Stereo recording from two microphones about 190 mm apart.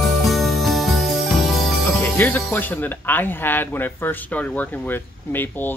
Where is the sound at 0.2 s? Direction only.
Centre (ahead or behind).